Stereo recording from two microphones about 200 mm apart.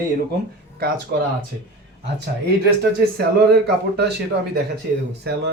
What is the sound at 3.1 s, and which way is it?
Speech, 55° right (ahead or behind).